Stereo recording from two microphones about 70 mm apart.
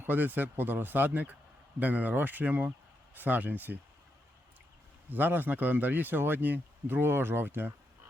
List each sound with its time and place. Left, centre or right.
0.0 s speech: right
5.0 s speech: right